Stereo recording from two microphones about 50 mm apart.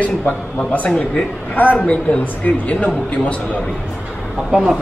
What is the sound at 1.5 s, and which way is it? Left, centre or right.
Speech, left.